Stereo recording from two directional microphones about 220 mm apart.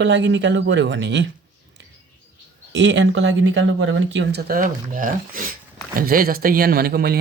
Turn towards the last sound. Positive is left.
turn(degrees=-45)  # may be behind; listen again after turning